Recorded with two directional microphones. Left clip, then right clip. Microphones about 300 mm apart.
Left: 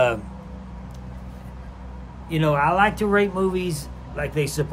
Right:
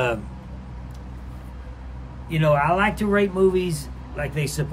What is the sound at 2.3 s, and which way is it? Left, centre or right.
Speech, centre.